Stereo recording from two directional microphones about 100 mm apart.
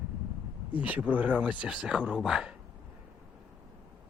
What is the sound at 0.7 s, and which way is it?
Speech, 15° right (ahead or behind).